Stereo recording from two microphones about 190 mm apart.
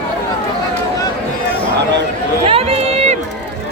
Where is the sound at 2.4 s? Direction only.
30° right (ahead or behind).